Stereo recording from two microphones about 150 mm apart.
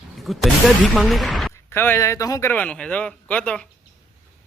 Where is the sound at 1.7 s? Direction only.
15° left (ahead or behind).